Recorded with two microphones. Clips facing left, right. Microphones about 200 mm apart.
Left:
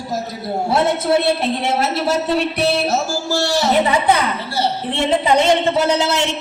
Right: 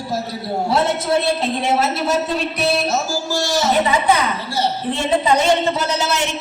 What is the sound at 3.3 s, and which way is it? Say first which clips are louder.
Speech: left 4 dB; 65° left (ahead or behind).